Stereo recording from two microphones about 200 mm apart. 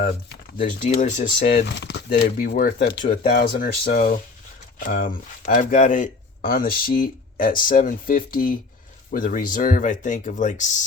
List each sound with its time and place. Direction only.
0.0 s speech: 45° left (ahead or behind)
1.6 s speech: 60° left (ahead or behind); by 10.8 s 40° left (ahead or behind)